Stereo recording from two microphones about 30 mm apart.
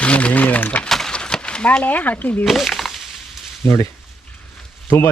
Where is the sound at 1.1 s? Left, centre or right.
Left.